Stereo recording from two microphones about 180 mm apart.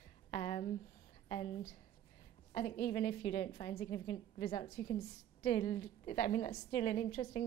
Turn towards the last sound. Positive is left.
turn(degrees=30)  # may be behind; listen again after turning